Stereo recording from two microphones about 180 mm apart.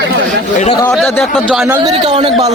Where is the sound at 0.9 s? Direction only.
Centre (ahead or behind).